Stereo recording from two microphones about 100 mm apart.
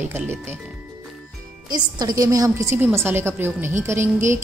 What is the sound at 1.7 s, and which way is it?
A woman's voice, 40° right (ahead or behind).